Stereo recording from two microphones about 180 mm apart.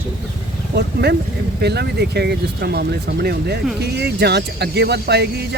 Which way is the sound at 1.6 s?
65° right (ahead or behind).